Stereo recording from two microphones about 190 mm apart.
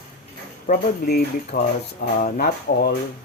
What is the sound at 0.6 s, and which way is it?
Speech, 50° left (ahead or behind).